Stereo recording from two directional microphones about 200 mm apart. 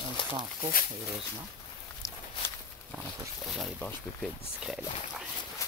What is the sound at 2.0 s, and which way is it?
Walk, 10° left (ahead or behind).